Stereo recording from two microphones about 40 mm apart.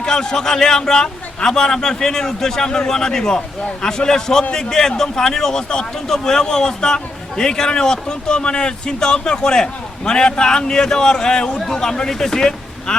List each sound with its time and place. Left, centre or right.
0.0 s a man's voice: centre